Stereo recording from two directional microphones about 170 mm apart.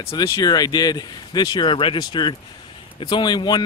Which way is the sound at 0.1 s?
25° left (ahead or behind).